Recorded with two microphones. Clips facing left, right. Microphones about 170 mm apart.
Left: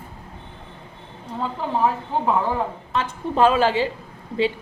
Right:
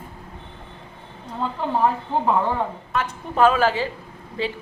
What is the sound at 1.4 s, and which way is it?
Speech, centre (ahead or behind).